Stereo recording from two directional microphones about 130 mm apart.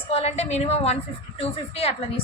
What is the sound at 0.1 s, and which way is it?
A woman's voice, 50° left (ahead or behind).